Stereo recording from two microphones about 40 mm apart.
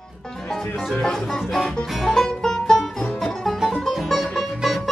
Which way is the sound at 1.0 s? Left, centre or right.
Centre.